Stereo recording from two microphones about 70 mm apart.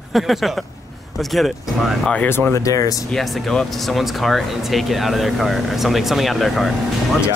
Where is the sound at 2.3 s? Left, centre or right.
Left.